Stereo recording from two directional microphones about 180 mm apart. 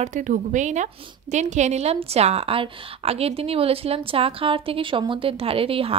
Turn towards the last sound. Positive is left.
turn(degrees=-30)  # may be behind; listen again after turning